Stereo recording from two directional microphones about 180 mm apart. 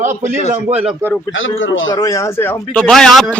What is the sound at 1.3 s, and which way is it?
Speech, 90° left.